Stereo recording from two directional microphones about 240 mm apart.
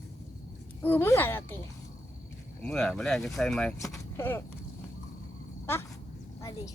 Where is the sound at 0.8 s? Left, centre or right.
Centre.